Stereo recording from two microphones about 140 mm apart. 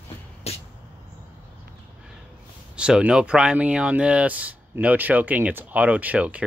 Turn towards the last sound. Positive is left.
turn(degrees=-10)  # may be behind; listen again after turning